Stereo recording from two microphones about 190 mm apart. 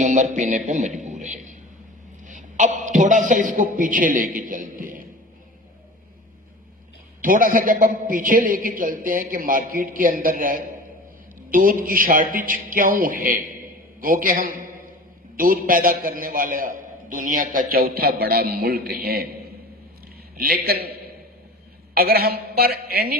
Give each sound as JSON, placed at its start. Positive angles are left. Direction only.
{"t": 0.0, "sound": "a man's voice", "side_deg": -40}
{"t": 7.2, "sound": "a man's voice", "side_deg": -45}
{"t": 20.3, "sound": "a man's voice", "side_deg": -50}
{"t": 21.9, "sound": "a man's voice", "side_deg": -55}